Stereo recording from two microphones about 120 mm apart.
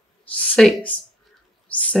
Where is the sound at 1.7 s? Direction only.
10° left (ahead or behind).